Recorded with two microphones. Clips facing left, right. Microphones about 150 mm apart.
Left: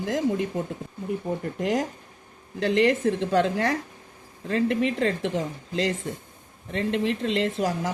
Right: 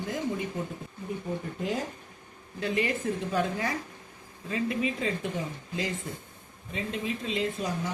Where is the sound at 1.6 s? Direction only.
85° left.